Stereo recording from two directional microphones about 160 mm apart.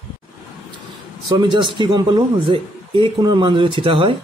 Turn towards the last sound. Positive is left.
turn(degrees=-35)  # may be behind; listen again after turning